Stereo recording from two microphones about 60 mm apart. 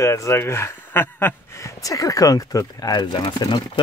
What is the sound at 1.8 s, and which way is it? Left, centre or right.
Speech, left.